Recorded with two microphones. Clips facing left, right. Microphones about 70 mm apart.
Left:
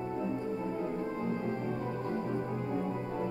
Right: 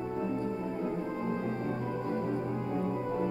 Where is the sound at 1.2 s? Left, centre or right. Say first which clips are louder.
Right 1 dB; centre.